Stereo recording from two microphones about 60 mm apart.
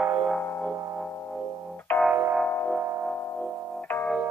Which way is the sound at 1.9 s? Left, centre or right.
Left.